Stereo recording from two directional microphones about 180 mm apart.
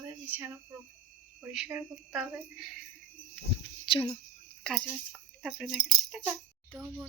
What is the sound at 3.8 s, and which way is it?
Speech, 25° left (ahead or behind).